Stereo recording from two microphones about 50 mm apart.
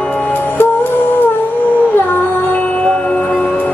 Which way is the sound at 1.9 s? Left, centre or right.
Left.